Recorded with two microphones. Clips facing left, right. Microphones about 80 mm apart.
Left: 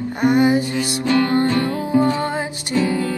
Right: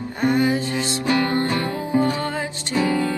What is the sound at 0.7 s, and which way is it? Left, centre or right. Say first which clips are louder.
Music: left 3 dB; right.